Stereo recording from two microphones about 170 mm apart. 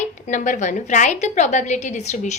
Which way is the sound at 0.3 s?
45° left (ahead or behind).